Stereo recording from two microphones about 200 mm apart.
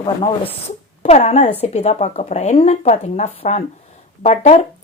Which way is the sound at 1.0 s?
35° left (ahead or behind).